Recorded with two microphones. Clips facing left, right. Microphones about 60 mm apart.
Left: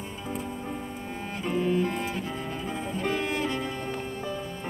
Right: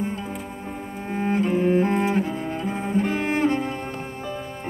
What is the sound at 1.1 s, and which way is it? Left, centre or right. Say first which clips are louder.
Cello: right 9 dB; right.